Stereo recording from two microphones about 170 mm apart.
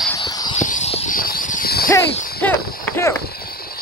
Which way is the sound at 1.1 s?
55° left (ahead or behind).